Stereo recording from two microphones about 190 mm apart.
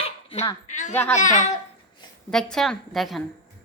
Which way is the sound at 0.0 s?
30° left (ahead or behind).